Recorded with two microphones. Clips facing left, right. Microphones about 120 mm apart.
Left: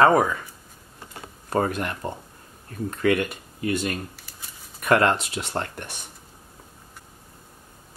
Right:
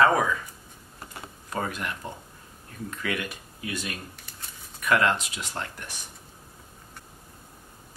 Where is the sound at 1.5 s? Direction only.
45° left (ahead or behind).